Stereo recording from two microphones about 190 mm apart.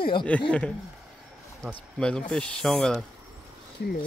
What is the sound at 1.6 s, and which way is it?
Speech, 5° left (ahead or behind).